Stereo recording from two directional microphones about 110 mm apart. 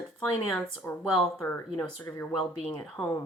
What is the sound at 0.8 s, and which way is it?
Speech, 20° left (ahead or behind).